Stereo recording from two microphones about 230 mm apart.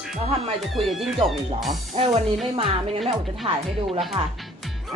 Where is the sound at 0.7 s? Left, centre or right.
Centre.